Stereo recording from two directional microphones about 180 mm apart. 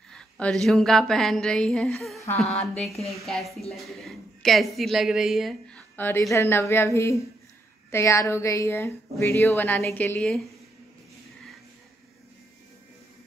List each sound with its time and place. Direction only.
0.1 s a sound: 5° left (ahead or behind)
2.4 s a woman's voice: 5° left (ahead or behind)
5.9 s a woman's voice: 10° left (ahead or behind)